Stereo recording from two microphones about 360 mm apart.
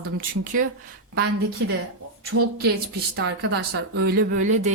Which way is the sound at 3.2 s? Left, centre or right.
Right.